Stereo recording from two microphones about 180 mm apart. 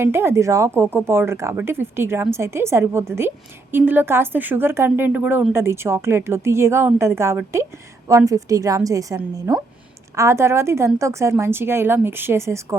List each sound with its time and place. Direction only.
0.0 s a woman's voice: 15° right (ahead or behind)